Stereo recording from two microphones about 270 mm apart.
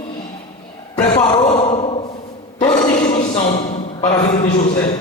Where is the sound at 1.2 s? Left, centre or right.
Centre.